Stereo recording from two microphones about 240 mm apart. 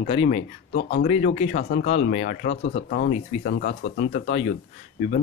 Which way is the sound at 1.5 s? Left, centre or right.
Left.